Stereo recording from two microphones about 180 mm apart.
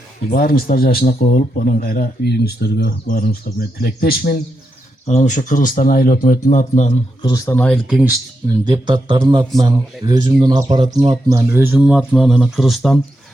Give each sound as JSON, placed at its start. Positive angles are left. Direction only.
{"t": 0.3, "sound": "a man's voice", "side_deg": 55}
{"t": 5.0, "sound": "speech", "side_deg": 40}
{"t": 7.2, "sound": "speech", "side_deg": 20}
{"t": 7.7, "sound": "speech", "side_deg": -5}
{"t": 8.6, "sound": "speech", "side_deg": -25}